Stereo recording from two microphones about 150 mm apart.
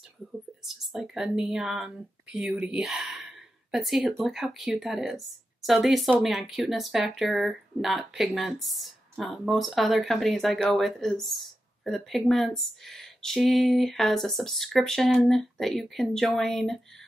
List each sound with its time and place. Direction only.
0.7 s speech: 5° right (ahead or behind)
2.5 s a sound: 5° right (ahead or behind)
4.2 s a woman's voice: centre (ahead or behind)